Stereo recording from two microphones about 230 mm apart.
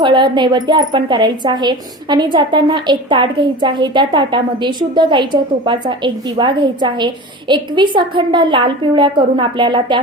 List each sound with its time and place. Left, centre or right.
0.0 s a woman's voice: right